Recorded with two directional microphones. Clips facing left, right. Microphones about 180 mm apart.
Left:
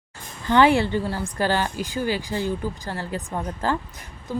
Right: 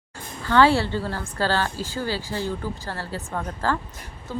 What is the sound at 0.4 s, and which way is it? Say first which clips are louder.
Speech: left 1 dB; 15° left (ahead or behind).